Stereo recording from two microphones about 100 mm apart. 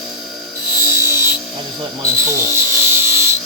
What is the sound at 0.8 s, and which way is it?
Filing, 25° right (ahead or behind).